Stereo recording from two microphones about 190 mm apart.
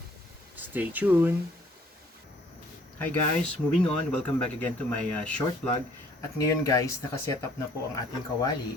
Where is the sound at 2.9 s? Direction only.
10° left (ahead or behind).